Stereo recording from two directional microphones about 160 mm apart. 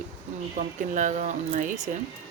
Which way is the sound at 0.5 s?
55° right (ahead or behind).